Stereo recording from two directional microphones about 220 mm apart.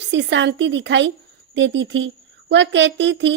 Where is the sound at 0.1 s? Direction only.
55° right (ahead or behind).